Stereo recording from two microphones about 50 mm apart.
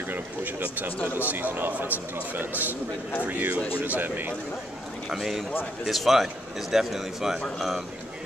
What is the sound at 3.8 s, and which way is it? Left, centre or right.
Speech, right.